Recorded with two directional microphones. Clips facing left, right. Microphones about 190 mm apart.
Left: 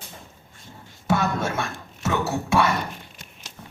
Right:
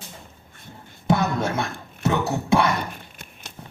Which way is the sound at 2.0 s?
20° right (ahead or behind).